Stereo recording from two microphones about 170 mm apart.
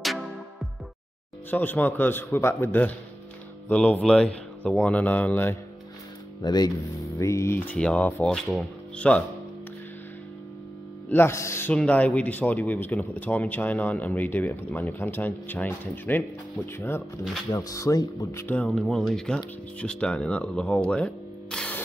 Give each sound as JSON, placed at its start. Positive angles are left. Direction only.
{"t": 1.5, "sound": "speech", "side_deg": 10}
{"t": 6.4, "sound": "speech", "side_deg": 25}
{"t": 11.1, "sound": "speech", "side_deg": 15}